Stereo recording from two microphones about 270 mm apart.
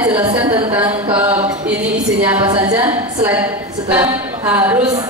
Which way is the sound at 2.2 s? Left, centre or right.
Centre.